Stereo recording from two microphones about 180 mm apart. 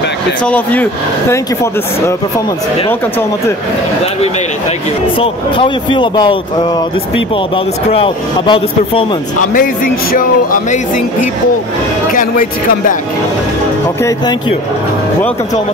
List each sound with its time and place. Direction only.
0.5 s speech: 10° left (ahead or behind)
5.2 s speech: 30° left (ahead or behind)
9.5 s speech: 50° left (ahead or behind)
12.1 s speech: 45° left (ahead or behind)